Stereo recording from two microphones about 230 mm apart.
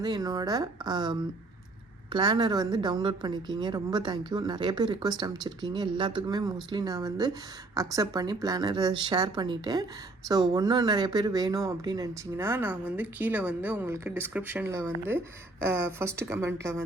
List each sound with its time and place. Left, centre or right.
0.0 s speech: centre
2.1 s a woman's voice: centre